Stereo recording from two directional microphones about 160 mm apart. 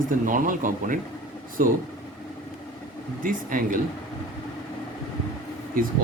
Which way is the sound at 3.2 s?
55° right (ahead or behind).